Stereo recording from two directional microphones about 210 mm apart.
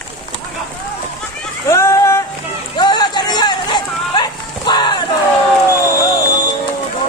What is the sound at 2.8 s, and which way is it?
Run, 20° left (ahead or behind).